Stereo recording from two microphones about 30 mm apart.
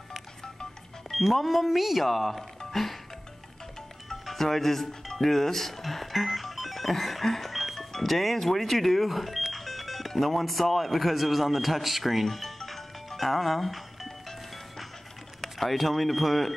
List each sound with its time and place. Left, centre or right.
1.1 s speech: centre
4.3 s speech: centre
15.4 s a sound: centre
15.8 s speech: centre